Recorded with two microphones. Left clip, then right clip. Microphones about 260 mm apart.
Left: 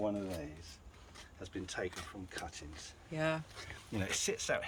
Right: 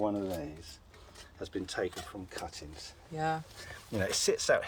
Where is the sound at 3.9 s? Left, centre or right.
Centre.